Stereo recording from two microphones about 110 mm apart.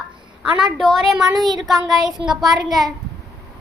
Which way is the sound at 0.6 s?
Centre (ahead or behind).